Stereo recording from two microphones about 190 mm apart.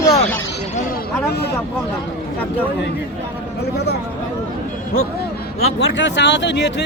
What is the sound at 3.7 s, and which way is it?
Speech, 60° left (ahead or behind).